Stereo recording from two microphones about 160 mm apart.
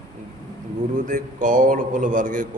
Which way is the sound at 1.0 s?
55° right (ahead or behind).